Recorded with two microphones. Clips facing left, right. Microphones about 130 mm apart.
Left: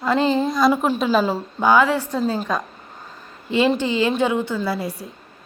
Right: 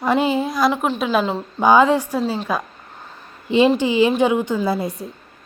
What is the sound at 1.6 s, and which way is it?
Speech, 20° right (ahead or behind).